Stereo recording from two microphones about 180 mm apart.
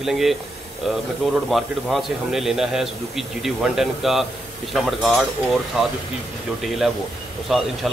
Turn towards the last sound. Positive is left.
turn(degrees=0)  # may be behind; listen again after turning